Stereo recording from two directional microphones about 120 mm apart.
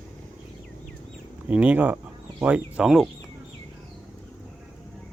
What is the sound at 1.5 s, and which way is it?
Speech, 10° right (ahead or behind).